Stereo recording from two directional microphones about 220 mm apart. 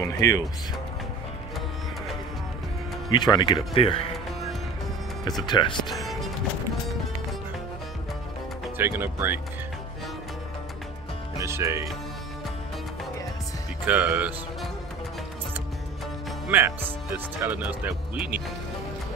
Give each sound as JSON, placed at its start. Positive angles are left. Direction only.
{"t": 0.0, "sound": "speech", "side_deg": 15}
{"t": 3.1, "sound": "speech", "side_deg": 20}
{"t": 5.5, "sound": "speech", "side_deg": 20}
{"t": 5.9, "sound": "music", "side_deg": 0}
{"t": 8.7, "sound": "speech", "side_deg": -10}
{"t": 11.3, "sound": "speech", "side_deg": -15}
{"t": 13.8, "sound": "speech", "side_deg": -5}
{"t": 16.4, "sound": "speech", "side_deg": -10}